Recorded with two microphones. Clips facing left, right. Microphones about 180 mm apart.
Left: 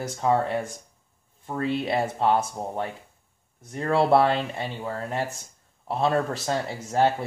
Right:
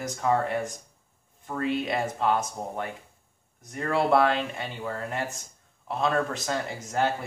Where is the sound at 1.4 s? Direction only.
30° left (ahead or behind).